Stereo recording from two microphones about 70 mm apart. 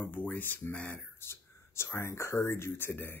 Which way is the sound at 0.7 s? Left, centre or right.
Centre.